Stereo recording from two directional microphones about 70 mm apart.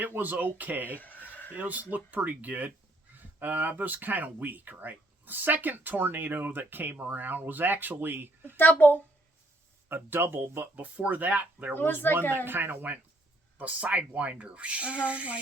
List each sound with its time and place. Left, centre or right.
0.0 s speech: right
0.9 s a sound: left
1.5 s speech: right
8.5 s a child's voice: left
9.9 s speech: right
11.7 s a child's voice: left
12.5 s speech: right